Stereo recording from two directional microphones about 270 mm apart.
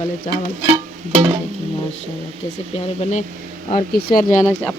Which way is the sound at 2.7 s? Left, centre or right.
Left.